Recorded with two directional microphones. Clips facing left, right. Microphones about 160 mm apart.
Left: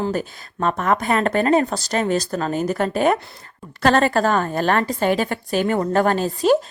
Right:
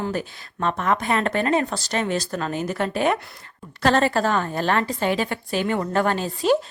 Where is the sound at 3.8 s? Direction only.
55° left (ahead or behind).